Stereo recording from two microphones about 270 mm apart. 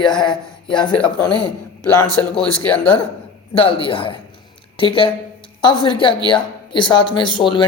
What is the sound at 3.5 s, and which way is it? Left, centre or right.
Speech, centre.